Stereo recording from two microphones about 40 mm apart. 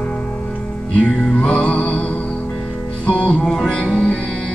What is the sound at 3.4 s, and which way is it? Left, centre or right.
Music, centre.